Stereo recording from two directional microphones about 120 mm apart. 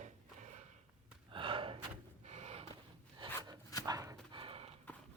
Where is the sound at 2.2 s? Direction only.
70° right (ahead or behind).